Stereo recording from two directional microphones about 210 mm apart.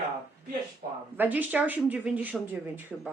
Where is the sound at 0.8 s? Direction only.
40° right (ahead or behind).